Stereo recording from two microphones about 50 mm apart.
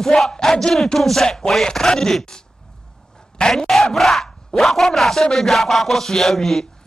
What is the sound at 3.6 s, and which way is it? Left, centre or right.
Speech, centre.